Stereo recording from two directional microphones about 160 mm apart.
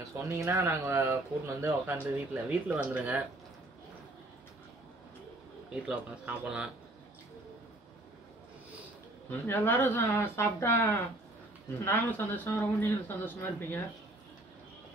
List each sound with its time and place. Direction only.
0.2 s speech: 20° right (ahead or behind)
5.9 s speech: 5° right (ahead or behind)
9.3 s a man's voice: 10° left (ahead or behind)